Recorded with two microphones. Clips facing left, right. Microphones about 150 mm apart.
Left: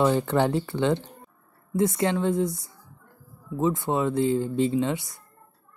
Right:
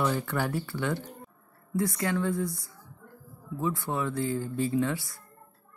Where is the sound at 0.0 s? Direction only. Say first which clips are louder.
Left 7 dB; 20° left (ahead or behind).